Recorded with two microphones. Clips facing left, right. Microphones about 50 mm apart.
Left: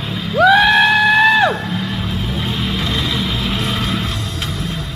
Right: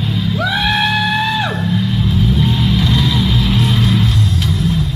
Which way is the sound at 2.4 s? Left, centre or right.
Centre.